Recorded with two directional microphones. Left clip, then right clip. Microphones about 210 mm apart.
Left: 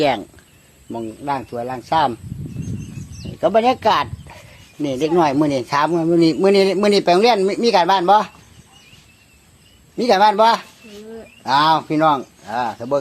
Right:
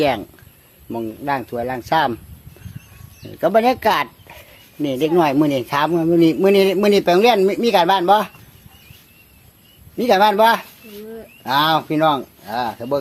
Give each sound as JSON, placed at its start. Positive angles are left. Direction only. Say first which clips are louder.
{"t": 0.0, "sound": "speech", "louder": "even", "side_deg": 0}
{"t": 0.9, "sound": "speech", "louder": "right 1 dB", "side_deg": -15}
{"t": 3.3, "sound": "speech", "louder": "even", "side_deg": -10}
{"t": 10.0, "sound": "speech", "louder": "even", "side_deg": 5}